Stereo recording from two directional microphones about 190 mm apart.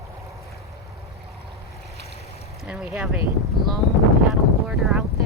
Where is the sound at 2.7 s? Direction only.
5° right (ahead or behind).